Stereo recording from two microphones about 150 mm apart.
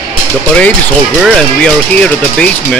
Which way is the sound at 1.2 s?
5° left (ahead or behind).